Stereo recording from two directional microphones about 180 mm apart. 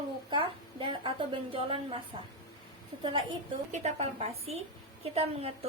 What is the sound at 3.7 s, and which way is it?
A woman's voice, 35° right (ahead or behind).